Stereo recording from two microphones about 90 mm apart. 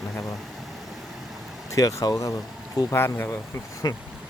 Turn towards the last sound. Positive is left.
turn(degrees=50)  # may be behind; listen again after turning